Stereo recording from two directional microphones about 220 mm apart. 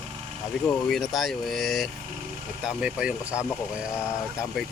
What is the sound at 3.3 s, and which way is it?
Speech, 10° left (ahead or behind).